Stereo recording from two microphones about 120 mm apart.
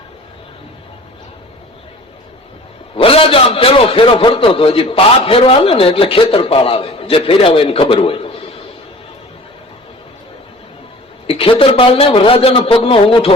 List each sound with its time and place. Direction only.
2.9 s a man's voice: 50° left (ahead or behind)
11.3 s a woman's voice: 50° left (ahead or behind)